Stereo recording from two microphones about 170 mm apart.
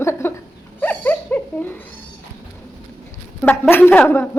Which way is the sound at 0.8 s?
10° left (ahead or behind).